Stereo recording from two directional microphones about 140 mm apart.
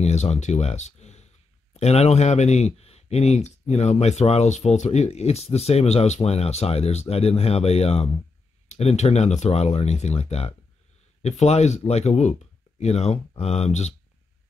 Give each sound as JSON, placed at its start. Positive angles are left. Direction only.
{"t": 0.0, "sound": "speech", "side_deg": 50}